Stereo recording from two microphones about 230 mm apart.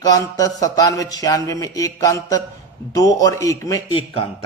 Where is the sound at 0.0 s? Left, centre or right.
Centre.